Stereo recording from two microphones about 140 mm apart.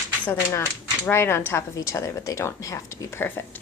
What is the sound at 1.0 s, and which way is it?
A woman's voice, 15° left (ahead or behind).